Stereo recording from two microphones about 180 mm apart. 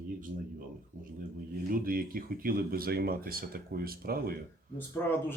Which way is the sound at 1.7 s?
50° right (ahead or behind).